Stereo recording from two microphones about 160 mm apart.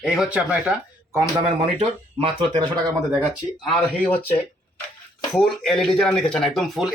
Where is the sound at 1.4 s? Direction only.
35° right (ahead or behind).